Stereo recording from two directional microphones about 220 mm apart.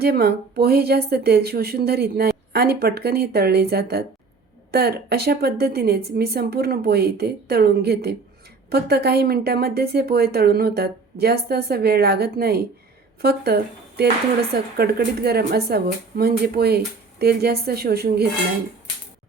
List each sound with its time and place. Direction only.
0.0 s a woman's voice: 45° right (ahead or behind)